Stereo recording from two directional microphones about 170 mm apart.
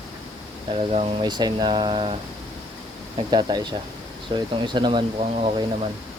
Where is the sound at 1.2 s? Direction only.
25° right (ahead or behind).